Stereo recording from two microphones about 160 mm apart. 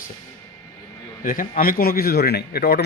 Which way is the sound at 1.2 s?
60° left (ahead or behind).